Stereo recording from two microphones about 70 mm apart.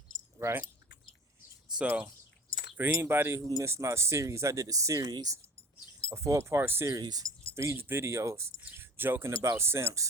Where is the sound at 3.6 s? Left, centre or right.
Right.